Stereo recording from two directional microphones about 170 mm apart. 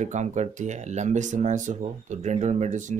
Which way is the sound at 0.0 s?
45° right (ahead or behind).